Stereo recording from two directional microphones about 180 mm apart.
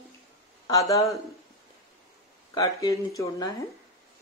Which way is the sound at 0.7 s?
20° left (ahead or behind).